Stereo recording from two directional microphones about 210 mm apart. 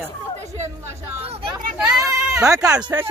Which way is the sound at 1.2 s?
25° right (ahead or behind).